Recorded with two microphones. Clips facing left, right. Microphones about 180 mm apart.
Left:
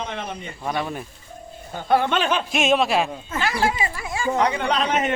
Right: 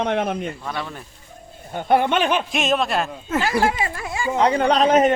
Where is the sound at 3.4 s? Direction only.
45° right (ahead or behind).